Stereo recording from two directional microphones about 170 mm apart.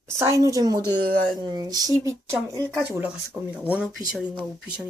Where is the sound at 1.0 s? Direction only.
55° right (ahead or behind).